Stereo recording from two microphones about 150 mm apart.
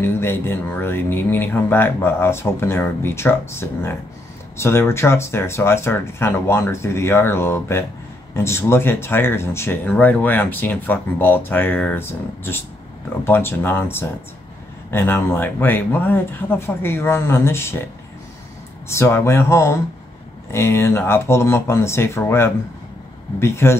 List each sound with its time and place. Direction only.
0.0 s speech: 15° left (ahead or behind)
18.9 s speech: 15° left (ahead or behind)